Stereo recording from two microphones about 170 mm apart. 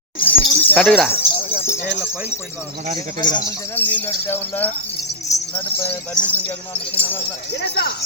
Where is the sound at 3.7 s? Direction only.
10° left (ahead or behind).